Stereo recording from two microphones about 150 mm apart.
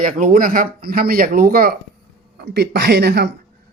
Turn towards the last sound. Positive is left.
turn(degrees=-90)